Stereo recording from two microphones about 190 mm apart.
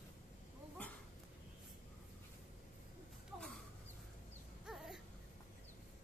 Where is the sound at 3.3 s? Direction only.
Centre (ahead or behind).